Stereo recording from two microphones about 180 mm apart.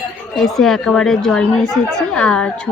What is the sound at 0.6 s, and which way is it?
Speech, centre (ahead or behind).